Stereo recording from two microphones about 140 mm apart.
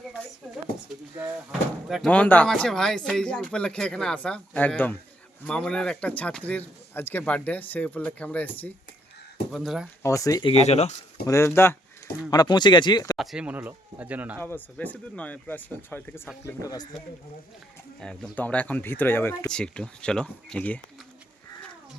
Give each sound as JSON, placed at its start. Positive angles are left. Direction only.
{"t": 2.0, "sound": "speech", "side_deg": 10}
{"t": 9.5, "sound": "speech", "side_deg": 0}
{"t": 10.0, "sound": "speech", "side_deg": 25}
{"t": 10.4, "sound": "speech", "side_deg": 50}
{"t": 11.3, "sound": "speech", "side_deg": 20}
{"t": 12.3, "sound": "speech", "side_deg": 30}
{"t": 13.1, "sound": "speech", "side_deg": -5}
{"t": 14.4, "sound": "speech", "side_deg": 10}
{"t": 18.0, "sound": "speech", "side_deg": 5}
{"t": 19.5, "sound": "speech", "side_deg": 5}